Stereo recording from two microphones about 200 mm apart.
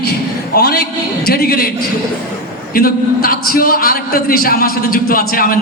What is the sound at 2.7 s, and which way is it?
A man's voice, 45° left (ahead or behind).